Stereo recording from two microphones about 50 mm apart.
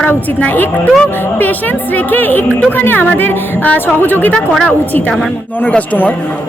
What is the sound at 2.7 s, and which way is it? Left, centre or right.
A woman's voice, left.